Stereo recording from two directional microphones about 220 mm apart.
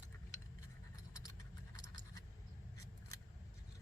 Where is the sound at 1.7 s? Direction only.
15° left (ahead or behind).